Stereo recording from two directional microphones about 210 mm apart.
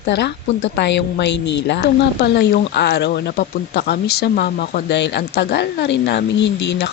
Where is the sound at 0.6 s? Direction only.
55° left (ahead or behind).